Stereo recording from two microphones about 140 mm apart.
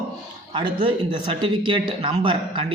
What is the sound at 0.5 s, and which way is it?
Speech, 35° right (ahead or behind).